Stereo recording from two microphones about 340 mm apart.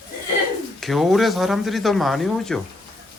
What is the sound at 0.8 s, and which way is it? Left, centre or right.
Speech, centre.